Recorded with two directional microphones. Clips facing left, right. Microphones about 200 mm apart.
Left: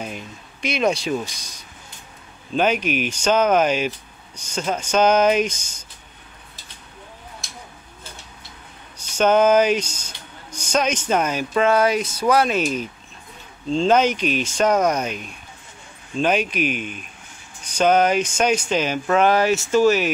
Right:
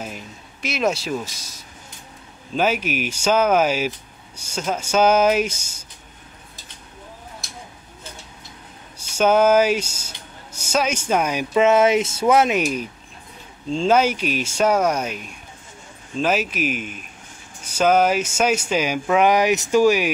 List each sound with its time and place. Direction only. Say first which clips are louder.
0.0 s a sound: left 1 dB; 5° right (ahead or behind)
2.5 s speech: left 1 dB; 5° right (ahead or behind)
8.9 s speech: even; 10° right (ahead or behind)